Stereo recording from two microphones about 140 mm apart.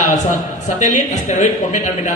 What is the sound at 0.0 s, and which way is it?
A man's voice, 60° left (ahead or behind).